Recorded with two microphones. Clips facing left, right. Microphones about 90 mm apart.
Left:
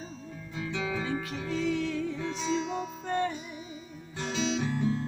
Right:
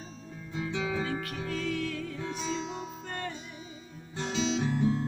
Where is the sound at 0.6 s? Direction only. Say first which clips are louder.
Right 1 dB; 25° right (ahead or behind).